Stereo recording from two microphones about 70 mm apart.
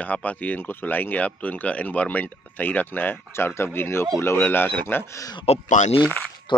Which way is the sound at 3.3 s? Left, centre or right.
Left.